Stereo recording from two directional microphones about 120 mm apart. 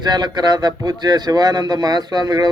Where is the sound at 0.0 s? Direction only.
35° right (ahead or behind).